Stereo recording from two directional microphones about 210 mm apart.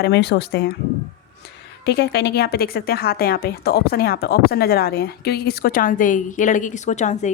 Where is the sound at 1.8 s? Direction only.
50° left (ahead or behind).